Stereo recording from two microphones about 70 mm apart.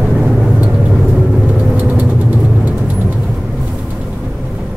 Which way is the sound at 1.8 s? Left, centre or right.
Centre.